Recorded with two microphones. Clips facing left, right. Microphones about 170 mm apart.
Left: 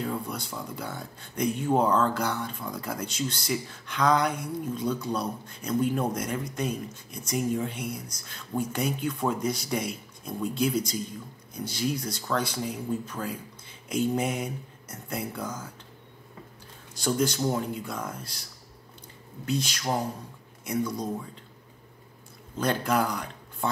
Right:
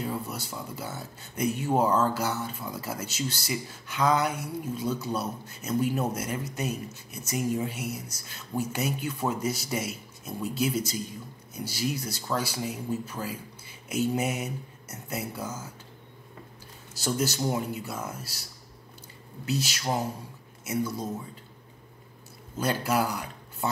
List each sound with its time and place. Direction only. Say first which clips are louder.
0.0 s speech: left 1 dB; 5° right (ahead or behind)
16.9 s speech: left 2 dB; 5° right (ahead or behind)
22.6 s speech: left 1 dB; 5° right (ahead or behind)